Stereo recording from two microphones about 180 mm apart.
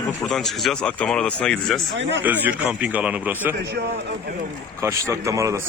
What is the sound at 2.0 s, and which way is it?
Speech, 85° right.